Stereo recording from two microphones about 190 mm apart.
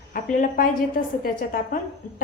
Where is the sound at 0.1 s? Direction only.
40° left (ahead or behind).